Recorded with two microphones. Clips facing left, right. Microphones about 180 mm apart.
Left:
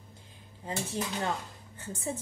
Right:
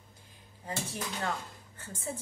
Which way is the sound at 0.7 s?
25° left (ahead or behind).